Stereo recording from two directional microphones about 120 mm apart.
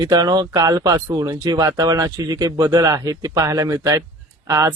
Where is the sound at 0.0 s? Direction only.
35° right (ahead or behind).